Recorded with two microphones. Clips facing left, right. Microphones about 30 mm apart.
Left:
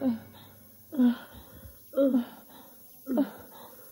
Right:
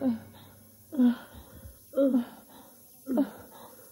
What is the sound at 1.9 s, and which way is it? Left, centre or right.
Gasp, centre.